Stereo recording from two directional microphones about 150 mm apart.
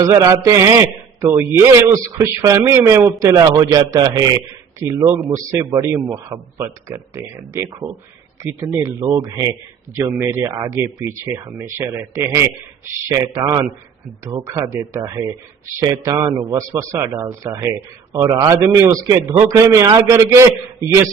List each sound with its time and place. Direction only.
0.0 s a man's voice: 20° right (ahead or behind)